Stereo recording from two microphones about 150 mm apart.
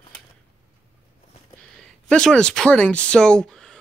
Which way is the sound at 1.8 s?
5° left (ahead or behind).